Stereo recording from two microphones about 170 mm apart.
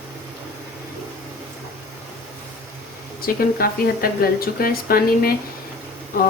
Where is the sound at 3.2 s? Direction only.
60° left (ahead or behind).